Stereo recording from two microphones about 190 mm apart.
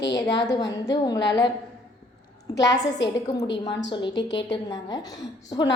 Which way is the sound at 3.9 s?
25° left (ahead or behind).